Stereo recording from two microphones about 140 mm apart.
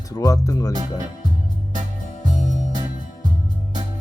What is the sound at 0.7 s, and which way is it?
Speech, 25° right (ahead or behind).